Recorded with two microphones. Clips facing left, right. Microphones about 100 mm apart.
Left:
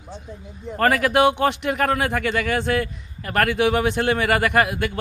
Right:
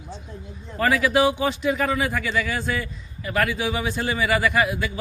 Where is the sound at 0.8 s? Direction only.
60° left (ahead or behind).